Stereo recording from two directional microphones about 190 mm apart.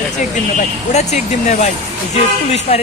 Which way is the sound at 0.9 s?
35° left (ahead or behind).